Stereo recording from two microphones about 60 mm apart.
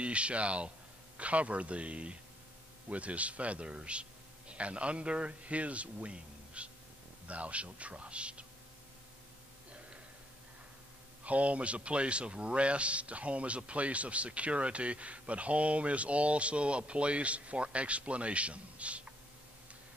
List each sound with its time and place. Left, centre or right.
0.0 s a man's voice: centre
11.2 s speech: right